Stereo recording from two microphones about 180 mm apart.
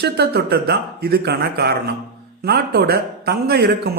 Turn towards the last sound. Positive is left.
turn(degrees=-60)  # may be behind; listen again after turning